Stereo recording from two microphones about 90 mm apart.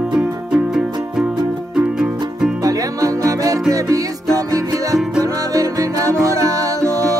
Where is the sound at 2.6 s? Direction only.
40° right (ahead or behind).